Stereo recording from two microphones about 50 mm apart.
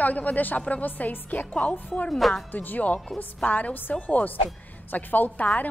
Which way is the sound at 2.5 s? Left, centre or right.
Left.